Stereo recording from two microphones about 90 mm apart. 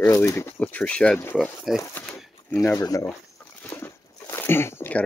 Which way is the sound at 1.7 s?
5° right (ahead or behind).